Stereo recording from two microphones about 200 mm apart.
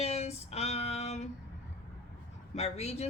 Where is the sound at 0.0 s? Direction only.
30° left (ahead or behind).